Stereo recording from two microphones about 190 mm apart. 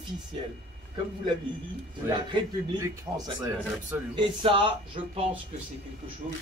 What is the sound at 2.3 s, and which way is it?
A man's voice, 20° right (ahead or behind).